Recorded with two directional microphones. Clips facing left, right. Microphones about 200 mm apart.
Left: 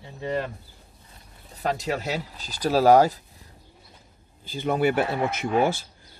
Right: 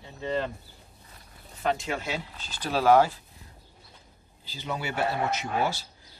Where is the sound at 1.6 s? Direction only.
40° left (ahead or behind).